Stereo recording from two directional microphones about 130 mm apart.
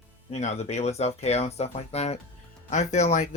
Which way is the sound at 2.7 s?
65° left (ahead or behind).